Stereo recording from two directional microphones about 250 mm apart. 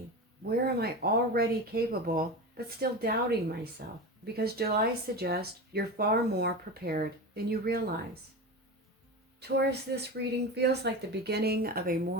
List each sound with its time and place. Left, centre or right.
0.6 s speech: right
9.4 s speech: right